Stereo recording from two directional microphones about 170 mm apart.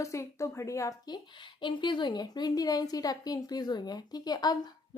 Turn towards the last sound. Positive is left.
turn(degrees=25)  # may be behind; listen again after turning